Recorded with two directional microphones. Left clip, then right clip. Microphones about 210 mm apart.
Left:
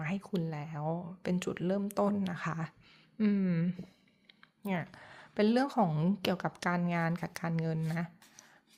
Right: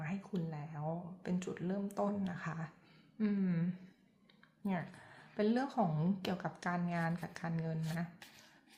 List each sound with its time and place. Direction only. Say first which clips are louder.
0.0 s speech: left 6 dB; 40° left (ahead or behind)